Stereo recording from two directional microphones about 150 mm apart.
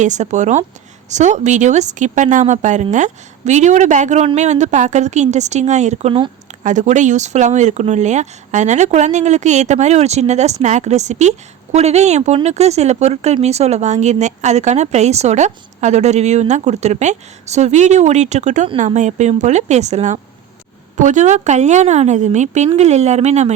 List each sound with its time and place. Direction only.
0.0 s speech: 55° right (ahead or behind)
6.6 s speech: 55° right (ahead or behind)